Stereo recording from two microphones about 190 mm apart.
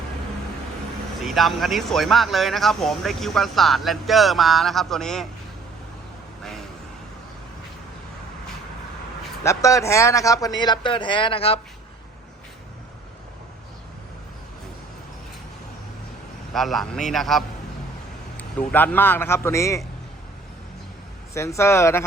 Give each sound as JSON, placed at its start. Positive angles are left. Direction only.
{"t": 1.2, "sound": "speech", "side_deg": 0}
{"t": 9.4, "sound": "a man's voice", "side_deg": 15}
{"t": 16.5, "sound": "speech", "side_deg": 0}
{"t": 18.7, "sound": "speech", "side_deg": 10}
{"t": 21.3, "sound": "speech", "side_deg": 15}